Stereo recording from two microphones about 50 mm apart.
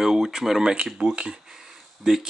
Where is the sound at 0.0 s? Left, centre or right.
Centre.